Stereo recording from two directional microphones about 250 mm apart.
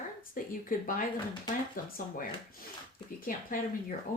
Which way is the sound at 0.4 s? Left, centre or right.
Left.